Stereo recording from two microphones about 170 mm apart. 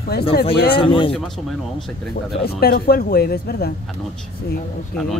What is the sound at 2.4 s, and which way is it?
Speech, 65° left (ahead or behind).